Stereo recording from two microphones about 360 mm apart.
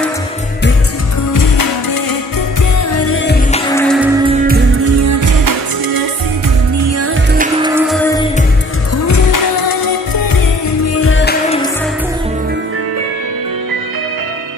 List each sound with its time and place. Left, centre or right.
1.3 s music: left
2.9 s music: left
3.5 s music: centre
4.8 s music: right
6.8 s music: right
7.6 s music: centre
8.9 s music: left
11.0 s music: left